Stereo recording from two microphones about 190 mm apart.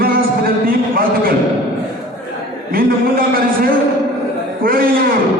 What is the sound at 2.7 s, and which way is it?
A man's voice, 50° right (ahead or behind).